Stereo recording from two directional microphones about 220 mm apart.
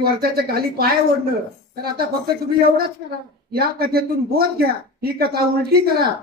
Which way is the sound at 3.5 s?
45° right (ahead or behind).